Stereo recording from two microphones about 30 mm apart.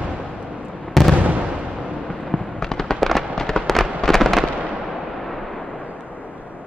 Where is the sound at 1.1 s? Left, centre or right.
Right.